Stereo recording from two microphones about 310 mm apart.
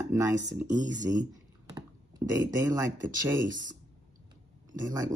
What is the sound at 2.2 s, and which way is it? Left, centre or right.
Speech, centre.